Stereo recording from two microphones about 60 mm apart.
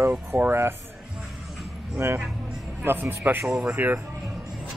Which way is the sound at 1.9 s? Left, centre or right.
Right.